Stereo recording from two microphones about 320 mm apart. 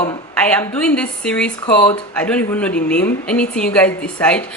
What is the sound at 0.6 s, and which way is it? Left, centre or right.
Speech, centre.